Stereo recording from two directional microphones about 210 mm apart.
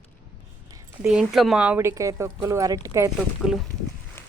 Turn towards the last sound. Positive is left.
turn(degrees=0)  # may be behind; listen again after turning